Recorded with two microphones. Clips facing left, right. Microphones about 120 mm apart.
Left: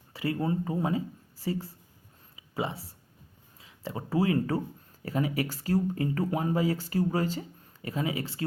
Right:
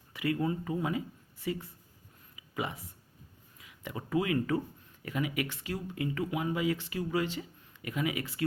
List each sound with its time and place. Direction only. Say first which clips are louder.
0.1 s speech: left 2 dB; 30° left (ahead or behind)
2.3 s a sound: left 3 dB; 25° left (ahead or behind)
3.6 s speech: left 4 dB; 30° left (ahead or behind)